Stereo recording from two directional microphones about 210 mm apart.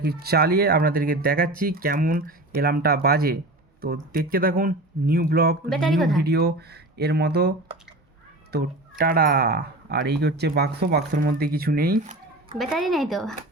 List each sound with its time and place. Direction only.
0.0 s speech: 45° right (ahead or behind)
5.6 s speech: centre (ahead or behind)
6.2 s speech: 50° right (ahead or behind)
8.5 s speech: 45° right (ahead or behind)
12.5 s speech: centre (ahead or behind)